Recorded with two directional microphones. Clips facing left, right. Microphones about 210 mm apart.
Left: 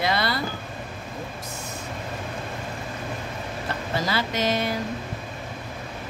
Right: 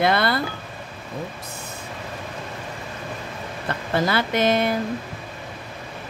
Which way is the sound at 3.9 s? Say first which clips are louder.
Right 5 dB; 55° right (ahead or behind).